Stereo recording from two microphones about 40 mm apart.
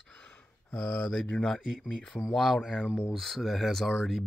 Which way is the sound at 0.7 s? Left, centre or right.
Centre.